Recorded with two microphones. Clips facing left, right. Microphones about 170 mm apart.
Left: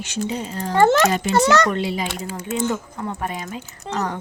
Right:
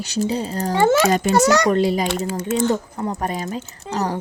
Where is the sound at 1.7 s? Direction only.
40° right (ahead or behind).